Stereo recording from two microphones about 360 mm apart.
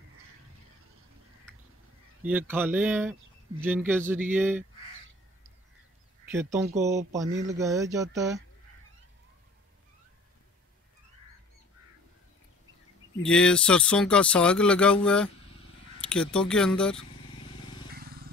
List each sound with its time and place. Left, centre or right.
2.2 s speech: centre
6.3 s speech: centre
13.2 s speech: centre
17.9 s vehicle: right